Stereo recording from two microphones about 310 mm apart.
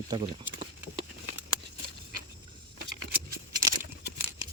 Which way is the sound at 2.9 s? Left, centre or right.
Right.